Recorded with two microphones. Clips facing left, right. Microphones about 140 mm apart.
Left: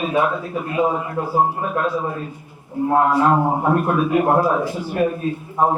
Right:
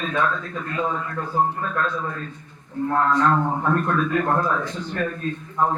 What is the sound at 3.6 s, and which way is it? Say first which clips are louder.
A man's voice: left 4 dB; 15° left (ahead or behind).